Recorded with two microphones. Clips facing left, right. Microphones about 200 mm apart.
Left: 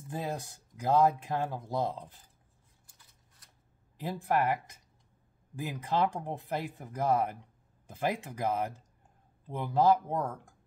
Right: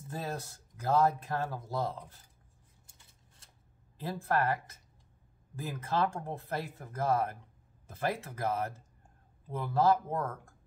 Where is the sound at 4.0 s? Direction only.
15° left (ahead or behind).